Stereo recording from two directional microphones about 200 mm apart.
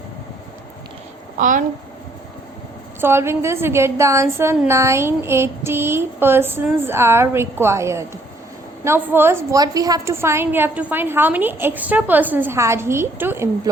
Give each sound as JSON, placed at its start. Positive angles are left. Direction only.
{"t": 1.4, "sound": "a child's voice", "side_deg": -40}
{"t": 3.0, "sound": "a woman's voice", "side_deg": -10}